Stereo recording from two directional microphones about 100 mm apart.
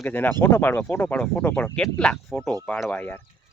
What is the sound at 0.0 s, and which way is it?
Speech, 20° left (ahead or behind).